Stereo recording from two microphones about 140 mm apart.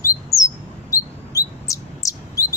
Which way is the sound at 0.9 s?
25° left (ahead or behind).